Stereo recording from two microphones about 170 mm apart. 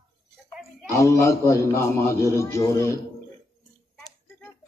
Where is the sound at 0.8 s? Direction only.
20° left (ahead or behind).